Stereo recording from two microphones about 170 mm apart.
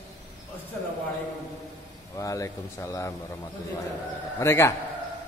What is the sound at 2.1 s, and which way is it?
Speech, 20° left (ahead or behind).